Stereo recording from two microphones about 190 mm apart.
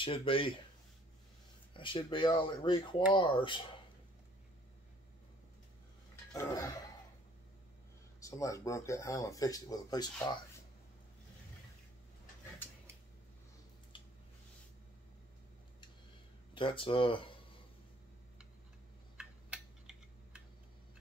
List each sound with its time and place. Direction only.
0.0 s speech: 25° left (ahead or behind)
1.7 s speech: 25° left (ahead or behind)
6.3 s speech: 15° left (ahead or behind)
8.2 s speech: 15° left (ahead or behind)
13.9 s a sound: 25° left (ahead or behind)
16.5 s speech: 25° left (ahead or behind)
19.1 s tick-tock: 5° right (ahead or behind)